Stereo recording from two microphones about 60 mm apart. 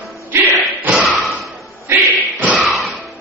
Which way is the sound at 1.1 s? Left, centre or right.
Centre.